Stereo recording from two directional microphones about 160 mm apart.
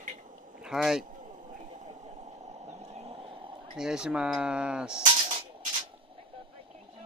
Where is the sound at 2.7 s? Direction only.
40° right (ahead or behind).